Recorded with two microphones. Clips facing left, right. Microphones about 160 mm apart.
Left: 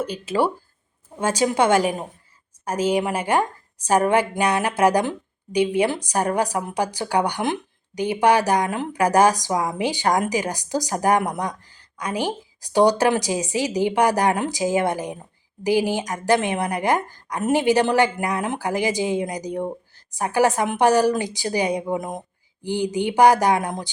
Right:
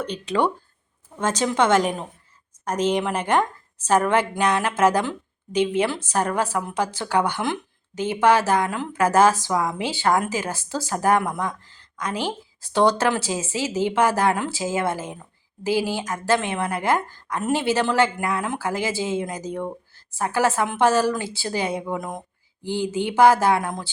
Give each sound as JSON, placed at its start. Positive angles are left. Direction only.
{"t": 0.0, "sound": "a woman's voice", "side_deg": 5}